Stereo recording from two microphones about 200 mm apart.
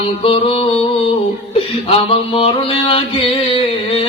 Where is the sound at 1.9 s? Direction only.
30° left (ahead or behind).